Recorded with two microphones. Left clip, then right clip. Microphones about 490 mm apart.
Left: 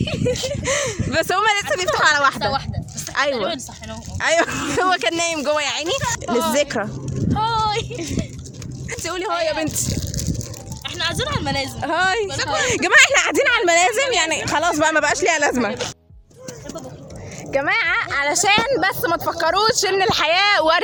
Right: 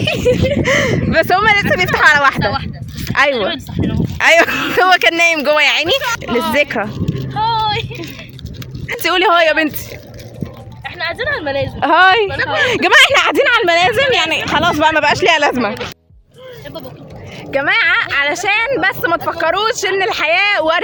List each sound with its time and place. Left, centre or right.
0.0 s speech: left
7.3 s vehicle: left
9.0 s speech: left
10.8 s a sound: left
11.8 s speech: left
18.1 s speech: left